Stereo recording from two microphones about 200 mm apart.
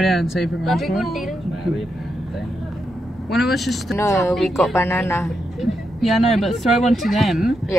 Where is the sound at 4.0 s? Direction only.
15° left (ahead or behind).